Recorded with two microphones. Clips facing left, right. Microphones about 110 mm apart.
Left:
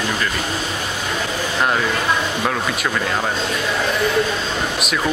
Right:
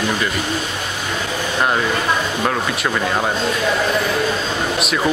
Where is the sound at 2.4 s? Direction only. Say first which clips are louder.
Right 1 dB; centre (ahead or behind).